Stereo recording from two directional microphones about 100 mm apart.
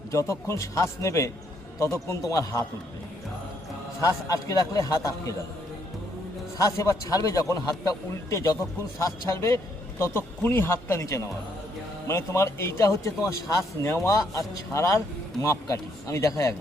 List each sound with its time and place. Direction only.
0.1 s a man's voice: 30° left (ahead or behind)
4.0 s a man's voice: 35° left (ahead or behind)
6.6 s a man's voice: 35° left (ahead or behind)